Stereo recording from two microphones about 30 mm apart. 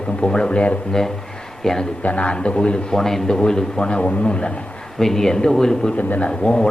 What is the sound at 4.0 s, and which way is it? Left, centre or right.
Speech, left.